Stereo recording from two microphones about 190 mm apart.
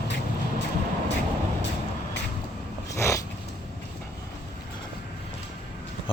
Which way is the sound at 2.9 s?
15° left (ahead or behind).